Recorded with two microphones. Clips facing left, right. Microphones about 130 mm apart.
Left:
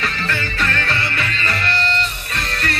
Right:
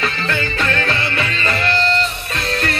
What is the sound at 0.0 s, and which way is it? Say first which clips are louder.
Music: right 3 dB; 25° right (ahead or behind).